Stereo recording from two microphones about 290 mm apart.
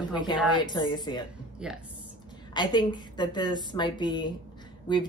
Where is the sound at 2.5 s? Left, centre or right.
Centre.